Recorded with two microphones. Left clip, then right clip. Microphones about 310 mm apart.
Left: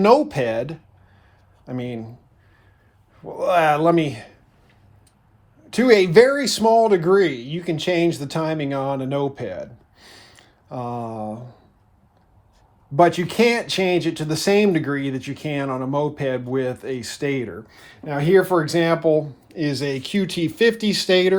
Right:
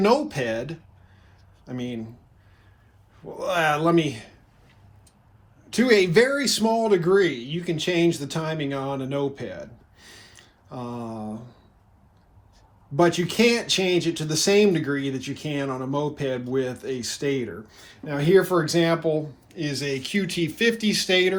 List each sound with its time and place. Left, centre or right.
0.0 s speech: left
3.2 s speech: left
5.7 s speech: left
9.3 s a sound: left
13.0 s speech: left